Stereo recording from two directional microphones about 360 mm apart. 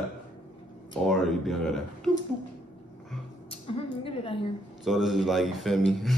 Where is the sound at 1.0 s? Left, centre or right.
Centre.